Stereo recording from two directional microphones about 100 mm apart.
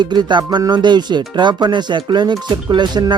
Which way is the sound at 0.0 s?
50° right (ahead or behind).